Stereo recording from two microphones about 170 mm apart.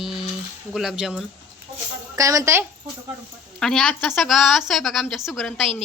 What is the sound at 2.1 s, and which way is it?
Speech, 20° right (ahead or behind).